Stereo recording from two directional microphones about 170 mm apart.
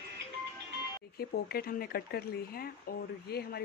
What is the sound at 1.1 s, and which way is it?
Speech, 65° left (ahead or behind).